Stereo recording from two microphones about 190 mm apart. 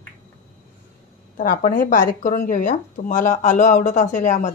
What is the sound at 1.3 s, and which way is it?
Speech, 45° left (ahead or behind).